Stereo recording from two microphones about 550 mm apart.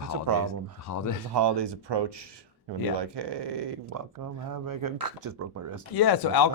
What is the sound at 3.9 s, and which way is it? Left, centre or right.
Speech, right.